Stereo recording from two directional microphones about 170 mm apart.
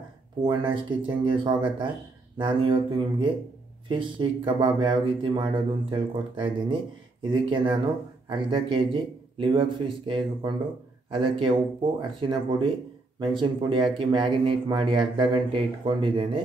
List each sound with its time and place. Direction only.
0.5 s speech: 30° right (ahead or behind)